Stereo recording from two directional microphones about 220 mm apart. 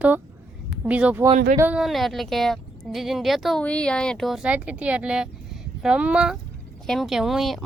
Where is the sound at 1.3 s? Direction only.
40° right (ahead or behind).